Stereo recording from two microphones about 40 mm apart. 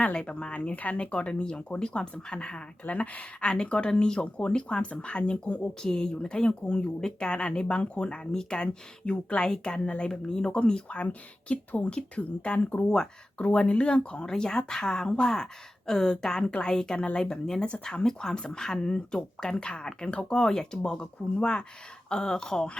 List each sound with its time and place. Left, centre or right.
0.0 s speech: left
0.9 s speech: left
2.8 s speech: left
3.5 s speech: left
5.8 s speech: centre
8.3 s speech: centre
8.6 s speech: left
10.1 s speech: centre
10.5 s speech: left
19.5 s speech: left